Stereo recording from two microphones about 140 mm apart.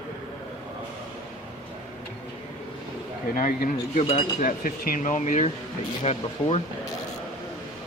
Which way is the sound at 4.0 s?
40° left (ahead or behind).